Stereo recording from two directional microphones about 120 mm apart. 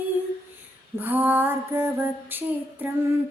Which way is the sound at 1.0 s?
15° right (ahead or behind).